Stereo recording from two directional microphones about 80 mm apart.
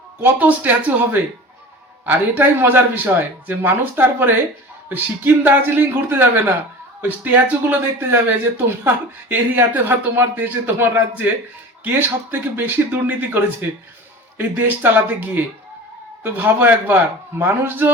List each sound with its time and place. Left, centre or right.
0.2 s speech: right